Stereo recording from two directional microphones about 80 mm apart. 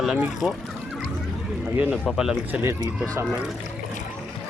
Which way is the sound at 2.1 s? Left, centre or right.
Centre.